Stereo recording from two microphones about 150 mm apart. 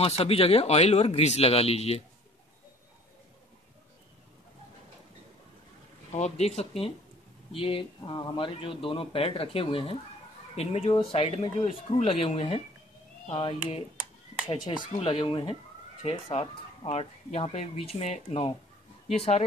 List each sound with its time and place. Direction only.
0.0 s speech: 40° left (ahead or behind)
6.1 s speech: 50° left (ahead or behind)
15.0 s speech: 35° left (ahead or behind)
16.0 s speech: 45° left (ahead or behind)